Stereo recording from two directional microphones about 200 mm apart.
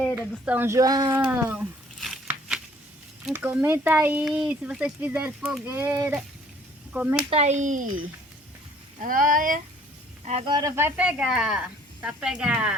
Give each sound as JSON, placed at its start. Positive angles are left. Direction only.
{"t": 0.2, "sound": "speech", "side_deg": -10}
{"t": 1.1, "sound": "a sound", "side_deg": -10}
{"t": 3.2, "sound": "speech", "side_deg": -10}
{"t": 7.3, "sound": "speech", "side_deg": -30}
{"t": 9.0, "sound": "speech", "side_deg": -45}
{"t": 10.5, "sound": "speech", "side_deg": -15}